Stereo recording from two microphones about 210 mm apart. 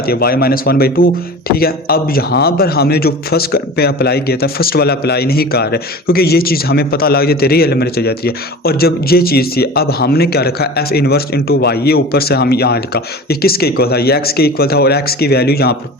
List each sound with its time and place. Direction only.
0.0 s speech: 45° left (ahead or behind)